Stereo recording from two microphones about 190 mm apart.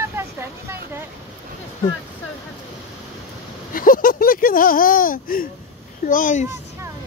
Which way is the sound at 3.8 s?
45° left (ahead or behind).